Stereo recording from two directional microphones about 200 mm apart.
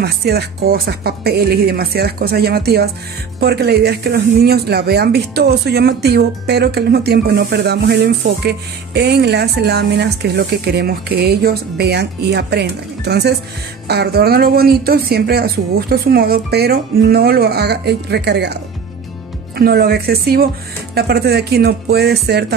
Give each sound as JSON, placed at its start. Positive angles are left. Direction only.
{"t": 0.0, "sound": "a woman's voice", "side_deg": -50}